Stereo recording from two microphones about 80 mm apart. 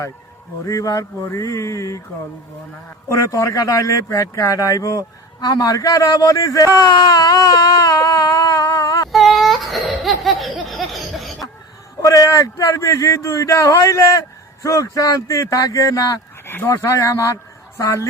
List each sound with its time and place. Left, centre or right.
0.6 s speech: left
1.3 s a sound: left
3.1 s speech: left
9.1 s laughter: centre
12.0 s speech: left
16.6 s a sound: left